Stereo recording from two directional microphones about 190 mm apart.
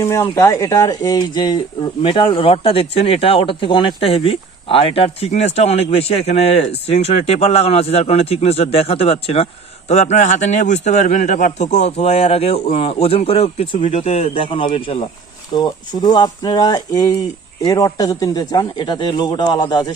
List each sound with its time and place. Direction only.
0.0 s speech: 15° left (ahead or behind)